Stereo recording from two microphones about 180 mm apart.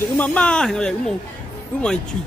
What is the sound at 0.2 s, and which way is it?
Speech, 5° left (ahead or behind).